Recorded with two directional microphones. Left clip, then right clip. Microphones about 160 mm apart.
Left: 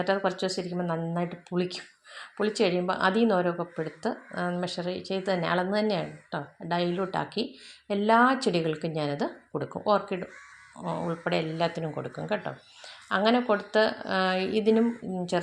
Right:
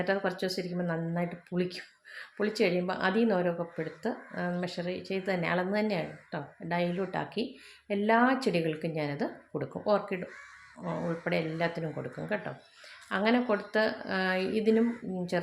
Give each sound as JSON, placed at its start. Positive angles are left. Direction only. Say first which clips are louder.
{"t": 0.0, "sound": "a woman's voice", "louder": "left 3 dB", "side_deg": 15}